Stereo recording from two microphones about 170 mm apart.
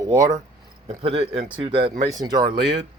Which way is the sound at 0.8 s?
35° right (ahead or behind).